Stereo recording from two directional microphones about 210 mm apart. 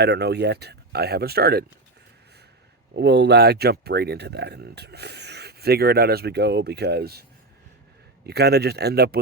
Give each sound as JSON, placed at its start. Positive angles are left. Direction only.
{"t": 0.0, "sound": "speech", "side_deg": -50}
{"t": 2.9, "sound": "speech", "side_deg": -55}
{"t": 8.3, "sound": "speech", "side_deg": -50}